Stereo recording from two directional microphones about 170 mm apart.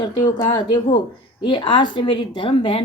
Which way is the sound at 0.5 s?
25° left (ahead or behind).